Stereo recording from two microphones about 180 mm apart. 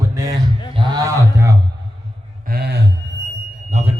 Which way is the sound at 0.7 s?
25° right (ahead or behind).